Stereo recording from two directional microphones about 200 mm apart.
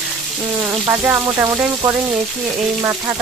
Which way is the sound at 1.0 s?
10° right (ahead or behind).